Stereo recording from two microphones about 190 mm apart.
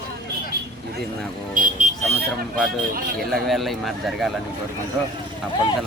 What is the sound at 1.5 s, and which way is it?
Speech, 45° right (ahead or behind).